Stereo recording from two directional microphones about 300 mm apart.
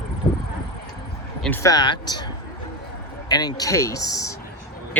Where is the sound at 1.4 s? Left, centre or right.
Centre.